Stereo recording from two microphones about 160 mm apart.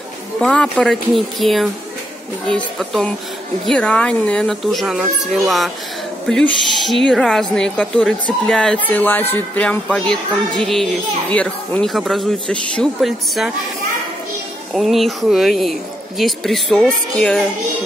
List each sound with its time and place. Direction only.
0.4 s speech: 5° left (ahead or behind)
14.7 s speech: centre (ahead or behind)